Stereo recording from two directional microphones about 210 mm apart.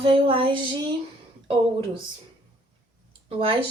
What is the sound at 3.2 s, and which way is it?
Speech, 25° right (ahead or behind).